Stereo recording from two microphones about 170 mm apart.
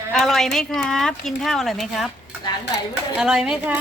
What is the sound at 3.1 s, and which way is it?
Speech, 5° right (ahead or behind).